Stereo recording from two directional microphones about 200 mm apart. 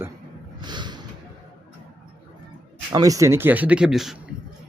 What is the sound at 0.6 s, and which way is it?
Snort, 20° right (ahead or behind).